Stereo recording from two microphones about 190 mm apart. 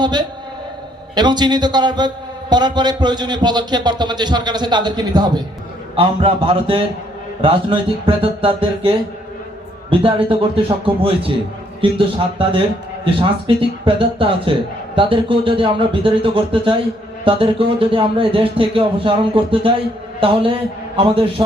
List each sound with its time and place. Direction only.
0.0 s a man's voice: 20° right (ahead or behind)